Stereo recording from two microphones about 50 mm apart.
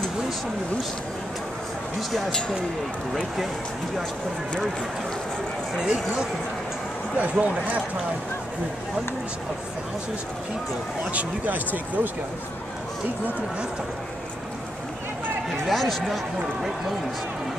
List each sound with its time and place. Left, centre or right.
2.0 s speech: centre
5.8 s speech: centre
7.2 s speech: right
11.1 s speech: right
15.6 s speech: centre